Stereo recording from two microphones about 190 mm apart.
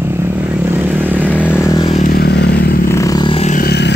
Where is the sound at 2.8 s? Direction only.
15° left (ahead or behind); by 3.6 s 30° left (ahead or behind).